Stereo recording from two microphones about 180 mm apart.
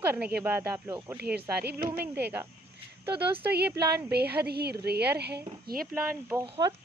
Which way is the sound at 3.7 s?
65° right (ahead or behind).